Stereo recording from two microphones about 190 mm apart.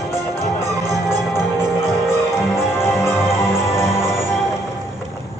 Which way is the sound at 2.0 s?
5° right (ahead or behind).